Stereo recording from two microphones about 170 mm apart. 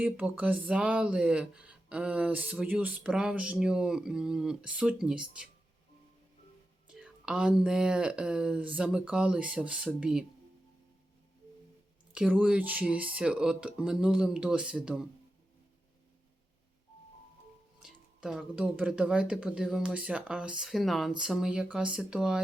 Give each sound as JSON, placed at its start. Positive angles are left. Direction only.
{"t": 0.0, "sound": "speech", "side_deg": -10}
{"t": 6.8, "sound": "speech", "side_deg": -5}
{"t": 12.1, "sound": "speech", "side_deg": -5}
{"t": 17.8, "sound": "speech", "side_deg": -5}